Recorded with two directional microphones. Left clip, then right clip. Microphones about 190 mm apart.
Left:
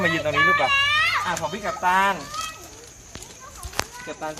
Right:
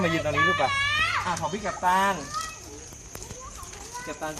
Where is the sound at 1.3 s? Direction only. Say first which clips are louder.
Left 3 dB; centre (ahead or behind).